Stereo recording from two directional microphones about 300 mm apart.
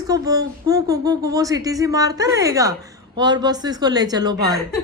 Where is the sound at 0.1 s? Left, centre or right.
Centre.